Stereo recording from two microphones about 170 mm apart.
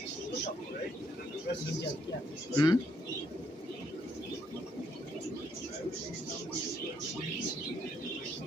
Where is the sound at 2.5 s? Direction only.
25° left (ahead or behind).